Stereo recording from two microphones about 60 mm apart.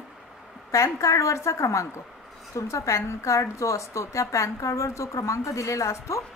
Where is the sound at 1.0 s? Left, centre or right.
Left.